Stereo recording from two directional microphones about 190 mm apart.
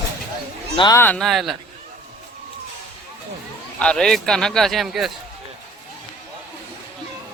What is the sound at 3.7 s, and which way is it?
A man's voice, 5° left (ahead or behind).